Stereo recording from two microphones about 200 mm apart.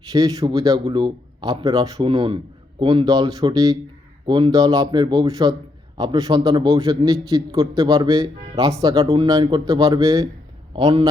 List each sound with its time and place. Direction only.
0.1 s speech: 15° right (ahead or behind)